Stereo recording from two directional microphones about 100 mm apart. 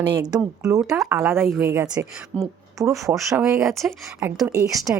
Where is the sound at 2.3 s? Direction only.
10° left (ahead or behind).